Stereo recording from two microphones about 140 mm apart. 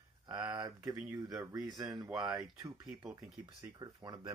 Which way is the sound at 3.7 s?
30° right (ahead or behind).